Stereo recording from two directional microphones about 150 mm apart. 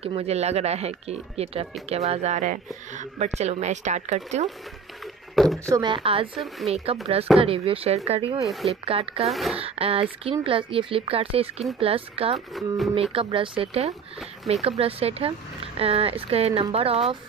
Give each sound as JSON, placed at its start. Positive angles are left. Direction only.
{"t": 0.0, "sound": "speech", "side_deg": -40}
{"t": 5.3, "sound": "a sound", "side_deg": 0}
{"t": 5.7, "sound": "speech", "side_deg": -30}
{"t": 6.3, "sound": "speech", "side_deg": 0}
{"t": 7.3, "sound": "speech", "side_deg": -40}
{"t": 9.3, "sound": "speech", "side_deg": 0}
{"t": 9.6, "sound": "speech", "side_deg": -40}
{"t": 12.5, "sound": "speech", "side_deg": 0}
{"t": 12.9, "sound": "speech", "side_deg": -40}